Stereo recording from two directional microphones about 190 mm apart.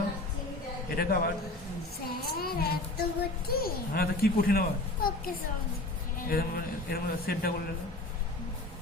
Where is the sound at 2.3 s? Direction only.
55° left (ahead or behind).